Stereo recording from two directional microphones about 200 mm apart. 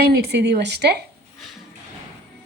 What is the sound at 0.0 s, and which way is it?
Speech, 55° right (ahead or behind).